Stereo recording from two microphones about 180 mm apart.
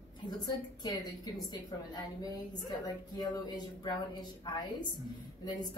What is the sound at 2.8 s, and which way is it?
A woman's voice, 20° left (ahead or behind).